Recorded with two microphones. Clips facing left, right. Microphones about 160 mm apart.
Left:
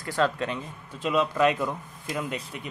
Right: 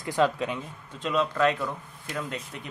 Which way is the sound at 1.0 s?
5° left (ahead or behind).